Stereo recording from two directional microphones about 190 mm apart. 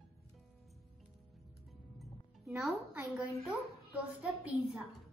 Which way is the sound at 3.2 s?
15° left (ahead or behind).